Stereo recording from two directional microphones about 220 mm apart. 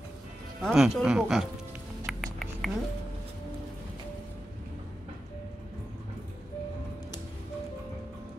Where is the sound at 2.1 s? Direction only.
Centre (ahead or behind).